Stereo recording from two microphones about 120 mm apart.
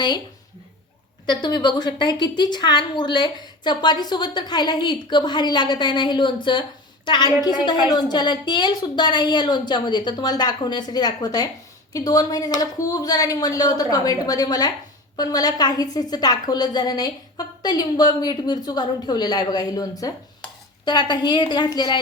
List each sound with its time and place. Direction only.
1.3 s a woman's voice: 40° left (ahead or behind)